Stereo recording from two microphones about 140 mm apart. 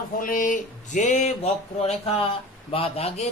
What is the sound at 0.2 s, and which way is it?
Speech, 75° left (ahead or behind).